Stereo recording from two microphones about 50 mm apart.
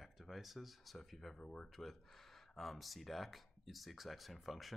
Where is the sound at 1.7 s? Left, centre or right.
Centre.